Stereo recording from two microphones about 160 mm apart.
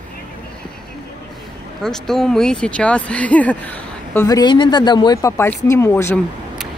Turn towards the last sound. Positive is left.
turn(degrees=15)  # may be behind; listen again after turning